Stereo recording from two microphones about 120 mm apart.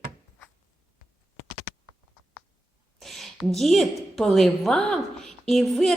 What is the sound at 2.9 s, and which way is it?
A woman's voice, centre (ahead or behind).